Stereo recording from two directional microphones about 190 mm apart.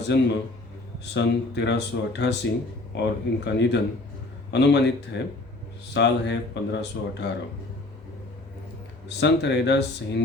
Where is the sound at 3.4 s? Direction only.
65° left (ahead or behind).